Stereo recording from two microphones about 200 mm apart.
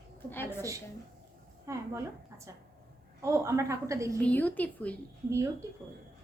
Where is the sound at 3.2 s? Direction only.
15° right (ahead or behind).